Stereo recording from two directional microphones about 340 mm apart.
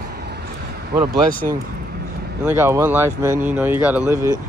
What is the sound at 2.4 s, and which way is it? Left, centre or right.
Speech, centre.